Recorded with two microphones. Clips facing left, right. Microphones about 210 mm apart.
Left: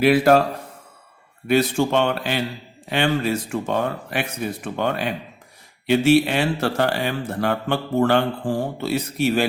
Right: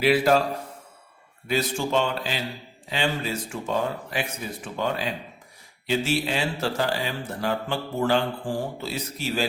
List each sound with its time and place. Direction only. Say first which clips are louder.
0.0 s speech: left 5 dB; 55° left (ahead or behind)
1.5 s speech: left 7 dB; 60° left (ahead or behind)